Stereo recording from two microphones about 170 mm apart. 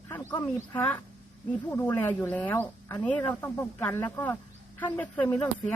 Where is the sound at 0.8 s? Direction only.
10° left (ahead or behind).